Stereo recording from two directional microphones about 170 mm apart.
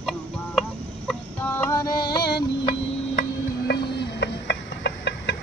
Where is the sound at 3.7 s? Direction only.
85° left.